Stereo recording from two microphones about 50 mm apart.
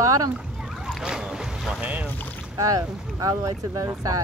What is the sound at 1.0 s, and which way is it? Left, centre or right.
Speech, centre.